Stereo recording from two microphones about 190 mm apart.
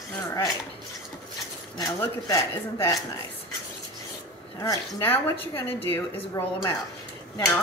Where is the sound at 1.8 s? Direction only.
15° left (ahead or behind).